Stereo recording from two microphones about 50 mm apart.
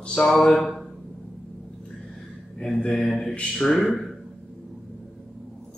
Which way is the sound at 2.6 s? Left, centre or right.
Centre.